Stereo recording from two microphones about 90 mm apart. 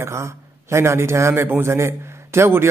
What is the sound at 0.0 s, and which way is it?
A man's voice, 30° right (ahead or behind).